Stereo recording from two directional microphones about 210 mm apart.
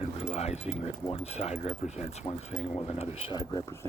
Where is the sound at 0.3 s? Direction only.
30° left (ahead or behind).